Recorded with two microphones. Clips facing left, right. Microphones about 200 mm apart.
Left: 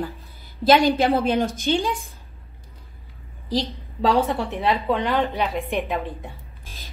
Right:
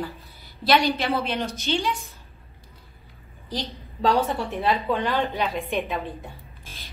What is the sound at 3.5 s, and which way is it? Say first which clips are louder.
Speech: left 7 dB; 35° left (ahead or behind).